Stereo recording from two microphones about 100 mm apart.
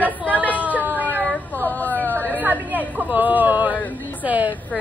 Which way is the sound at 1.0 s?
15° right (ahead or behind).